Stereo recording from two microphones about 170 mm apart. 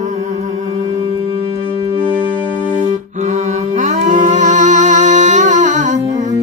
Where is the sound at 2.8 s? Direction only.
45° right (ahead or behind).